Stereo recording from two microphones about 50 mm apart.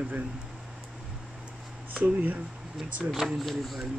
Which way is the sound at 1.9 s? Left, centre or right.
Right.